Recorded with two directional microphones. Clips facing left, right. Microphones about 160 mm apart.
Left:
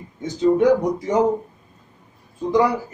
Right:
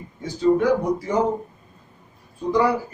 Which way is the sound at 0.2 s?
20° left (ahead or behind).